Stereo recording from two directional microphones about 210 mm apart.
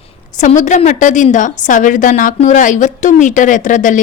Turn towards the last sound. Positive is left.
turn(degrees=35)  # may be behind; listen again after turning